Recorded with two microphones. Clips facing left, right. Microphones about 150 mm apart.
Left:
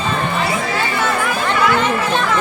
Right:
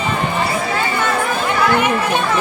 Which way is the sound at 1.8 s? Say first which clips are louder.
Right 1 dB; 15° right (ahead or behind).